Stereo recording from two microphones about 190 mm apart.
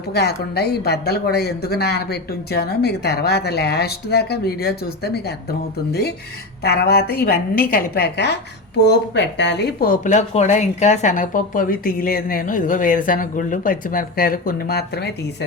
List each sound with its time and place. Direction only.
0.1 s speech: 60° left (ahead or behind)
9.9 s a woman's voice: 40° left (ahead or behind); by 15.4 s 60° left (ahead or behind)